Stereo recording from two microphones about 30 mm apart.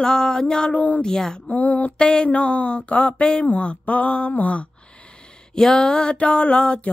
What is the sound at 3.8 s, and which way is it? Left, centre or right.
Mantra, left.